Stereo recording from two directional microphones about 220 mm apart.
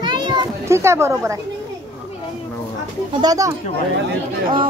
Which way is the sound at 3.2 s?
15° right (ahead or behind).